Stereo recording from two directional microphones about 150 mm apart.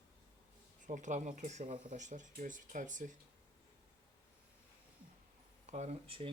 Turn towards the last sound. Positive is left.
turn(degrees=-40)  # may be behind; listen again after turning